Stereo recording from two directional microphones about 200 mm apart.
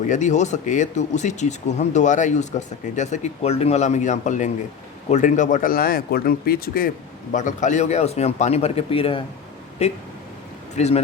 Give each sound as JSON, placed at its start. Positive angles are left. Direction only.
{"t": 0.1, "sound": "speech", "side_deg": 35}